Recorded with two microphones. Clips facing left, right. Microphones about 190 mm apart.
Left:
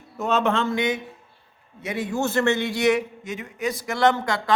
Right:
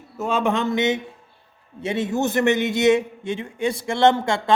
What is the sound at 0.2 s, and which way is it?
A man's voice, 10° right (ahead or behind).